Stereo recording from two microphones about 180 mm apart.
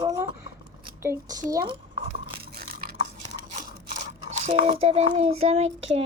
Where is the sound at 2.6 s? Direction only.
55° right (ahead or behind).